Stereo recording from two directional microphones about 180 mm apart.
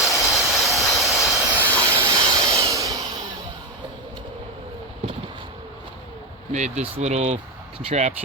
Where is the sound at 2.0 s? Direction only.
20° right (ahead or behind).